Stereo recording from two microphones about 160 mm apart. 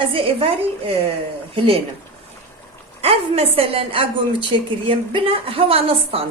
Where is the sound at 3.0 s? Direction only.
35° right (ahead or behind).